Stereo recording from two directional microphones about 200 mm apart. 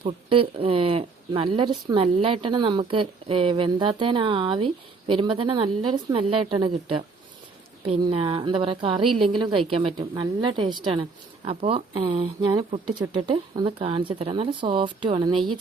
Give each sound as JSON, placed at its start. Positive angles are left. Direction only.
{"t": 0.0, "sound": "speech", "side_deg": -25}